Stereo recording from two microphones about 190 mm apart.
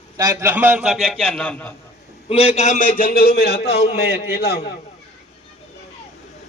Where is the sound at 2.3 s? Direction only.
30° left (ahead or behind); by 4.7 s 50° left (ahead or behind).